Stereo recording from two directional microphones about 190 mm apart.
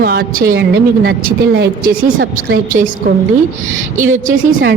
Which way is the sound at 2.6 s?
45° right (ahead or behind).